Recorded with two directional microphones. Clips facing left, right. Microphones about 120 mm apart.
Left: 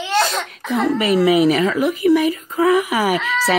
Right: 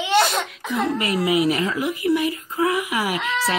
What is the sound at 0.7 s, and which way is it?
Speech, 90° left.